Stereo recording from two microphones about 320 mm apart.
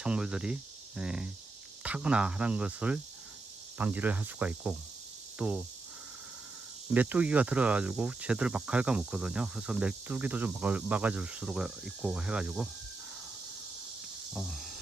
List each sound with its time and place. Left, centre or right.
0.0 s speech: centre
6.9 s speech: centre
14.3 s speech: centre